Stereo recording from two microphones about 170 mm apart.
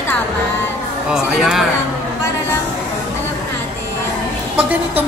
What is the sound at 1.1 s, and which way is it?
Speech, centre (ahead or behind).